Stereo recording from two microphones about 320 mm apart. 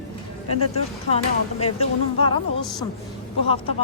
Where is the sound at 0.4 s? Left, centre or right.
Left.